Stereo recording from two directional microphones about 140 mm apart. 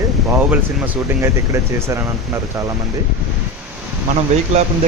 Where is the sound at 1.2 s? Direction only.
20° right (ahead or behind).